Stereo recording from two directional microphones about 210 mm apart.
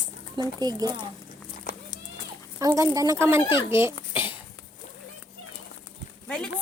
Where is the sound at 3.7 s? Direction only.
10° right (ahead or behind).